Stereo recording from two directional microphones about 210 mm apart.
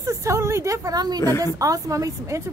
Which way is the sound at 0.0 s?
15° right (ahead or behind).